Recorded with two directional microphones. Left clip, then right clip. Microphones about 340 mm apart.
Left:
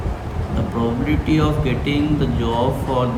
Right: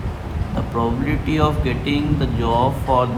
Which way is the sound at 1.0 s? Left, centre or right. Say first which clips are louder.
Left 1 dB; centre.